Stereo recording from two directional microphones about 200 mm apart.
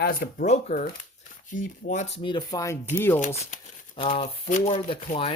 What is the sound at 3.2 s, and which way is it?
Speech, 35° left (ahead or behind).